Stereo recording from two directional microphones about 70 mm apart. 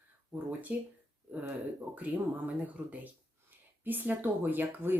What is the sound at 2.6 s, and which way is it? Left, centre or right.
Speech, centre.